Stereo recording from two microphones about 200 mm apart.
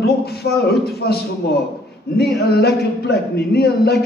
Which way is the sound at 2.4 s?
50° left (ahead or behind).